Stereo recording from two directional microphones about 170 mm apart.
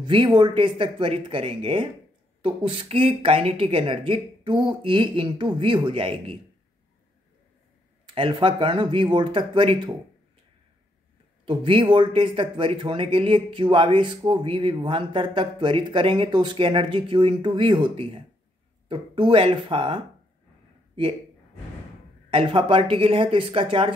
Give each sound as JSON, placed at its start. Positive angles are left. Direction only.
{"t": 0.0, "sound": "speech", "side_deg": -30}
{"t": 8.1, "sound": "speech", "side_deg": -30}
{"t": 11.4, "sound": "speech", "side_deg": -30}
{"t": 22.3, "sound": "speech", "side_deg": -30}